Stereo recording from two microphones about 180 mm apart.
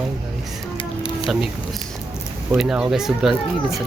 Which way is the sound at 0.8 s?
30° left (ahead or behind).